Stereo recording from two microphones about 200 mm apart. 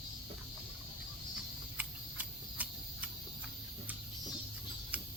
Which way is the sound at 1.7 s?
5° right (ahead or behind).